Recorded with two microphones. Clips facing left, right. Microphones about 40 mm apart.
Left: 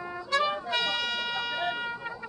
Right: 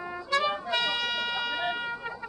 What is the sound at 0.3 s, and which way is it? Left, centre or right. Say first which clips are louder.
Music: even; centre.